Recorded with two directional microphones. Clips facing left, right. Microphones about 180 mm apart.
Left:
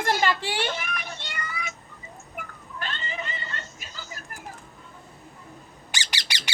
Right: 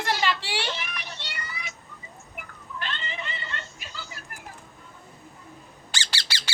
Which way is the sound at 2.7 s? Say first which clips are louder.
Left 1 dB; 45° left (ahead or behind).